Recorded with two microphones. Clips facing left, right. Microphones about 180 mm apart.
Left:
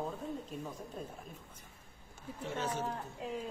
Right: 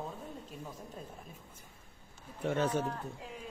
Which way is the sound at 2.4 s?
60° right (ahead or behind).